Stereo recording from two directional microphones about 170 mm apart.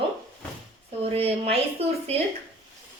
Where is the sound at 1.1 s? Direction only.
35° right (ahead or behind).